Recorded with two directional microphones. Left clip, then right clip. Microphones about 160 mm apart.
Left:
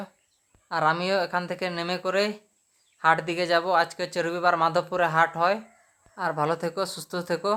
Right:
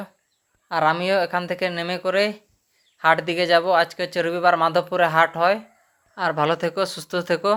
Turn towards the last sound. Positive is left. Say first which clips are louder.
# right 6 dB
turn(degrees=-15)  # may be behind; listen again after turning